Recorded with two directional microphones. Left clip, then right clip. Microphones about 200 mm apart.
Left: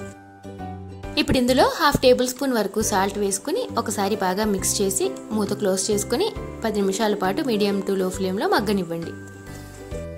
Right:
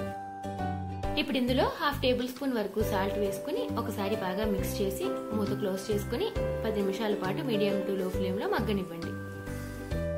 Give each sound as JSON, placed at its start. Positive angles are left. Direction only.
{"t": 1.1, "sound": "a woman's voice", "side_deg": 50}